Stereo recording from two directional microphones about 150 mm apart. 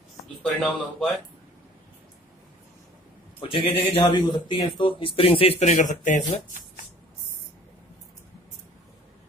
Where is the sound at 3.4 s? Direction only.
35° left (ahead or behind); by 6.6 s 60° left (ahead or behind).